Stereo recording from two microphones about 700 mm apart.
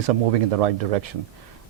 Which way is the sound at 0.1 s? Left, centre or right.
Right.